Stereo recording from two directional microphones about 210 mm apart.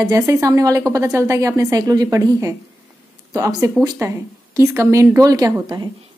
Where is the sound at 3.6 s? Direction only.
15° right (ahead or behind).